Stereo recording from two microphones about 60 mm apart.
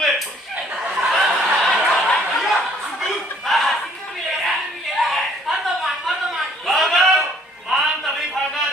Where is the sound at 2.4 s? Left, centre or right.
Centre.